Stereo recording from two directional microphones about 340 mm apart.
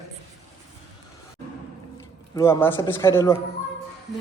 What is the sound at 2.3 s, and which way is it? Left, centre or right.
A man's voice, centre.